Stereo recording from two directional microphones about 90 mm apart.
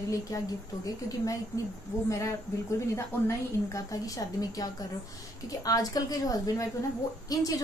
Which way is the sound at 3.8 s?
40° left (ahead or behind).